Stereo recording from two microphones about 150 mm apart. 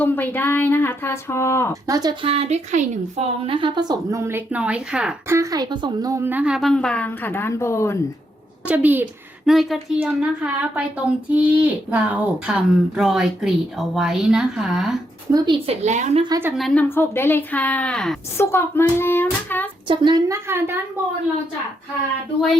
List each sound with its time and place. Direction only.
0.0 s speech: 10° left (ahead or behind)
1.7 s a woman's voice: 25° right (ahead or behind)
2.2 s a woman's voice: 40° right (ahead or behind); by 5.1 s 5° right (ahead or behind)
5.3 s speech: 20° right (ahead or behind); by 8.0 s 20° left (ahead or behind)
8.6 s a woman's voice: 10° right (ahead or behind)
9.5 s speech: centre (ahead or behind)
15.3 s a woman's voice: 35° right (ahead or behind); by 16.2 s 50° right (ahead or behind)
16.6 s speech: centre (ahead or behind)
16.9 s speech: 15° left (ahead or behind)
18.3 s speech: 15° left (ahead or behind)
19.9 s a woman's voice: 30° right (ahead or behind)